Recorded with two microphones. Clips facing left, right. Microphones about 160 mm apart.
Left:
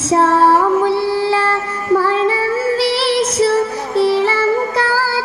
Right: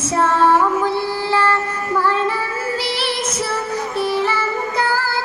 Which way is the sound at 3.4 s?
30° left (ahead or behind).